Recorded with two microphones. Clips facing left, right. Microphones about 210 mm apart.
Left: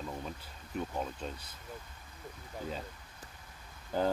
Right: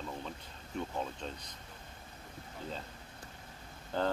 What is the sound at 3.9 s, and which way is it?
Speech, 10° left (ahead or behind).